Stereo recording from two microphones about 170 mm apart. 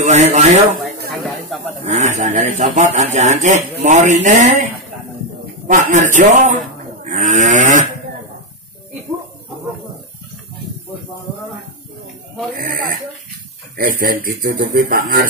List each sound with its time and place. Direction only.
0.0 s speech: 40° right (ahead or behind)
1.5 s snake: centre (ahead or behind)
1.9 s a man's voice: 45° right (ahead or behind)
5.7 s speech: 45° right (ahead or behind)
12.6 s a man's voice: 55° right (ahead or behind)